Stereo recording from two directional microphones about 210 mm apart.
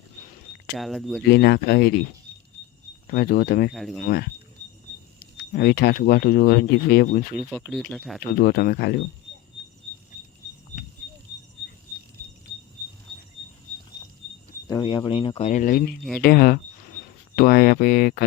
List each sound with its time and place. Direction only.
0.8 s speech: centre (ahead or behind)
1.2 s speech: 50° left (ahead or behind)
3.1 s speech: 45° left (ahead or behind)
3.8 s speech: centre (ahead or behind)
4.0 s speech: 45° left (ahead or behind)
5.5 s speech: 50° left (ahead or behind)
7.6 s speech: centre (ahead or behind)
8.2 s speech: 45° left (ahead or behind)
14.7 s speech: 20° left (ahead or behind); by 18.3 s 45° left (ahead or behind)